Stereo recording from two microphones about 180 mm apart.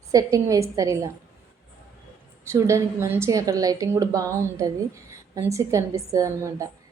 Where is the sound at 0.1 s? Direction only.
20° right (ahead or behind).